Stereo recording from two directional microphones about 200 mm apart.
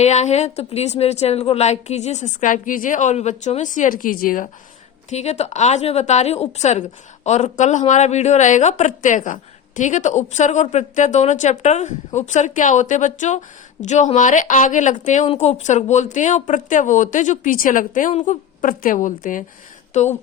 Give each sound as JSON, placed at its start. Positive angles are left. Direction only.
{"t": 0.0, "sound": "speech", "side_deg": 35}
{"t": 5.0, "sound": "speech", "side_deg": 35}